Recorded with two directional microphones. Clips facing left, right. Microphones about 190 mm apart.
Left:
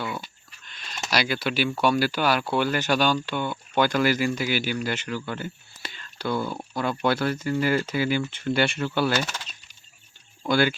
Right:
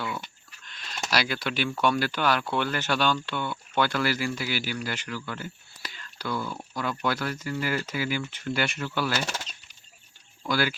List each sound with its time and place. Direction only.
0.6 s a sound: 5° left (ahead or behind)
1.8 s speech: 5° left (ahead or behind); by 9.1 s 30° left (ahead or behind)
10.4 s speech: 25° left (ahead or behind)